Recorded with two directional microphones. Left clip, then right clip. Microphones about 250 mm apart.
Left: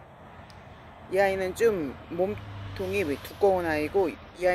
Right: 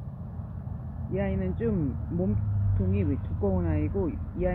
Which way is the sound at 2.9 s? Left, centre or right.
Left.